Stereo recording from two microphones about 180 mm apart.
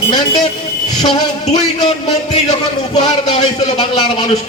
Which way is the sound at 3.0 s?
25° left (ahead or behind).